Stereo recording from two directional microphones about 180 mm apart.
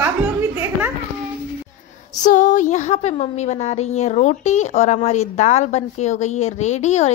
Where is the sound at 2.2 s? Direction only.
45° left (ahead or behind).